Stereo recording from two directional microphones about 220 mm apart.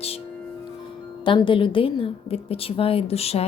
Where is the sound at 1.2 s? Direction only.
20° left (ahead or behind).